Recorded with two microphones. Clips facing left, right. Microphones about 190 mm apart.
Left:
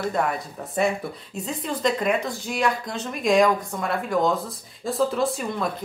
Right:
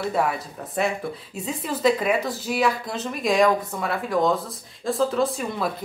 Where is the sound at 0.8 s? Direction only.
Centre (ahead or behind).